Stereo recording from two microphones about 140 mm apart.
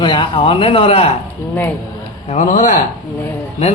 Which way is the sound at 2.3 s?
60° left (ahead or behind).